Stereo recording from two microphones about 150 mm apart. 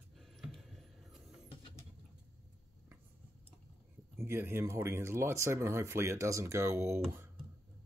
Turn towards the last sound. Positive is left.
turn(degrees=-20)  # may be behind; listen again after turning